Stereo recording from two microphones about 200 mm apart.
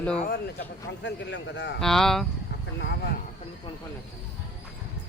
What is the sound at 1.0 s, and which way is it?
Speech, 60° left (ahead or behind).